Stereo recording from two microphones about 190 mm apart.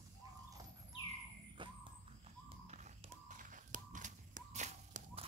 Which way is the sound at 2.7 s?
40° right (ahead or behind).